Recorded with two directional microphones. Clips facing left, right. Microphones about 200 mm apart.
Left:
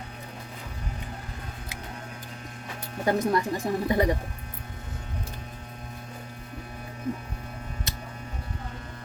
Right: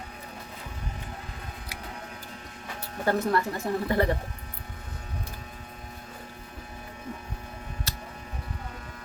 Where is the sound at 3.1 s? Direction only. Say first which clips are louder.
Left 1 dB; 15° left (ahead or behind).